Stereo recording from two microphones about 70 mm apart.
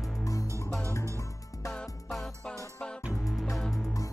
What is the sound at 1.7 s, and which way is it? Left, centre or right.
Music, centre.